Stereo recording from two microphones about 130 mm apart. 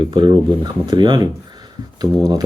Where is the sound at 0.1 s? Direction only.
35° right (ahead or behind).